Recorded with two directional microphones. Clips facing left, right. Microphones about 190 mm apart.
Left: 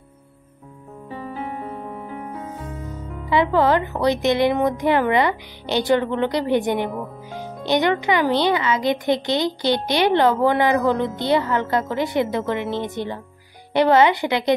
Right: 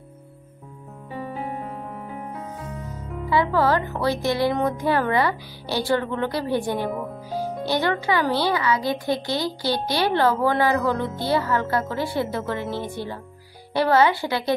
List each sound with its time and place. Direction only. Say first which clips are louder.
1.1 s music: even; centre (ahead or behind)
3.3 s speech: left 3 dB; 20° left (ahead or behind)